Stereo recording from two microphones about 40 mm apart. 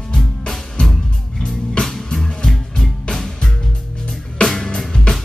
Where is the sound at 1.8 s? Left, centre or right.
Centre.